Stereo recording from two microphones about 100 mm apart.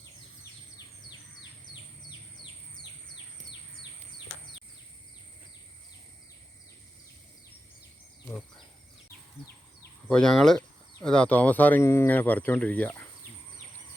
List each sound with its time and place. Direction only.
10.1 s speech: 5° left (ahead or behind)